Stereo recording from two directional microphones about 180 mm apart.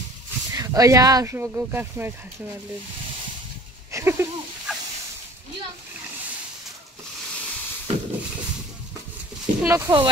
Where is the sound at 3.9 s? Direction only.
15° right (ahead or behind).